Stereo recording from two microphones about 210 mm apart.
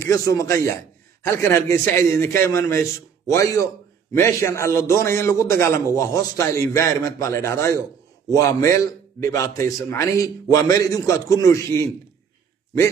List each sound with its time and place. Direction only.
0.0 s a man's voice: 15° left (ahead or behind)